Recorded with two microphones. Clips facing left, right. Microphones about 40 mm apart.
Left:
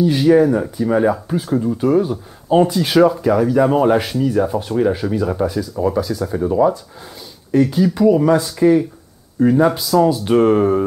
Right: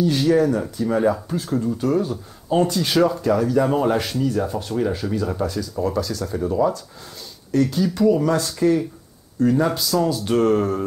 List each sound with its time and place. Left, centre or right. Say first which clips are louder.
0.0 s speech: left 5 dB; centre